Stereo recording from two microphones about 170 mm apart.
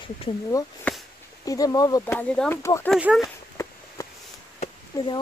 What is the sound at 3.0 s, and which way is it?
Speech, 5° right (ahead or behind).